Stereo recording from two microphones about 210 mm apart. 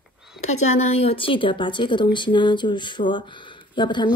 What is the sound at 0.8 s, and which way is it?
A woman's voice, 30° left (ahead or behind).